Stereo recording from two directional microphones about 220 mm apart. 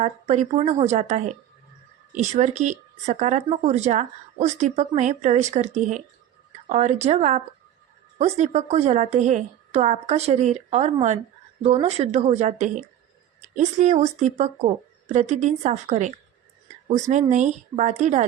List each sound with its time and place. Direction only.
0.0 s speech: 30° right (ahead or behind)